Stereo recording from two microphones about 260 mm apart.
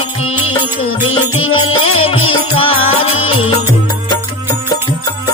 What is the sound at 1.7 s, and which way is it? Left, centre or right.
Music, left.